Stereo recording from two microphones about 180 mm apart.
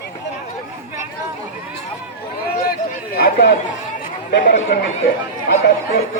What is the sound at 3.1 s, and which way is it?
Speech, 65° left (ahead or behind).